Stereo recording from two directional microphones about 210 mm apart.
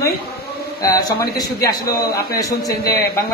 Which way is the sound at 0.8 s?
15° left (ahead or behind).